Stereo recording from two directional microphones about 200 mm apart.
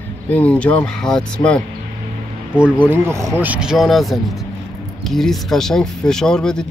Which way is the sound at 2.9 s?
15° right (ahead or behind).